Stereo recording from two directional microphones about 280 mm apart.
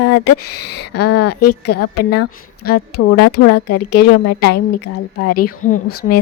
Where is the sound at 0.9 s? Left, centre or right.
Left.